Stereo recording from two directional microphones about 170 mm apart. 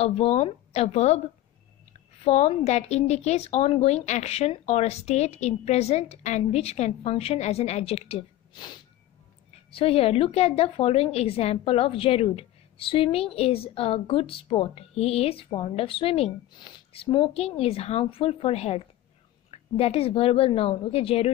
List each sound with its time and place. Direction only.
0.0 s a woman's voice: 40° left (ahead or behind)
2.2 s a woman's voice: 40° left (ahead or behind)
9.8 s a woman's voice: 35° left (ahead or behind)